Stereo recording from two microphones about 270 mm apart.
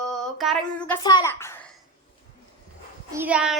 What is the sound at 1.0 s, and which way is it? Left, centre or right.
Speech, centre.